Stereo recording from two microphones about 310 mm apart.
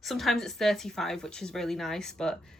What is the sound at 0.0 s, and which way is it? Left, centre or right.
Speech, centre.